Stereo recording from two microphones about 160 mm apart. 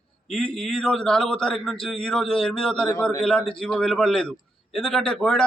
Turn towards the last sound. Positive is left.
turn(degrees=5)  # may be behind; listen again after turning